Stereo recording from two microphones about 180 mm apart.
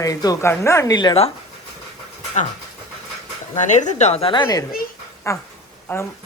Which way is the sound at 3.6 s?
40° left (ahead or behind).